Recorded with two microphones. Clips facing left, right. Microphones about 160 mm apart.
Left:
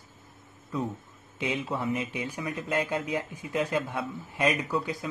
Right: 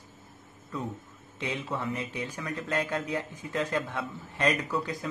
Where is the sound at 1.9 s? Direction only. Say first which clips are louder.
Left 3 dB; 15° left (ahead or behind).